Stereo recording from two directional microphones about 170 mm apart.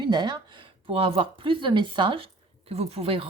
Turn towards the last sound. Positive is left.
turn(degrees=-35)  # may be behind; listen again after turning